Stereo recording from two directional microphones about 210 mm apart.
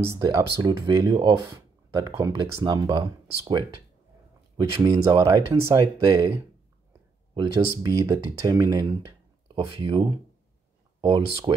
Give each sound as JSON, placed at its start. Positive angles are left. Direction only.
{"t": 0.0, "sound": "speech", "side_deg": -15}